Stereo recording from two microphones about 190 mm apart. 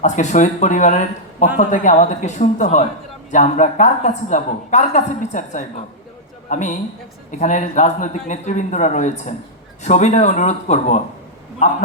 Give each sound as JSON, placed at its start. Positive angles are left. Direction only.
{"t": 0.0, "sound": "a woman's voice", "side_deg": 40}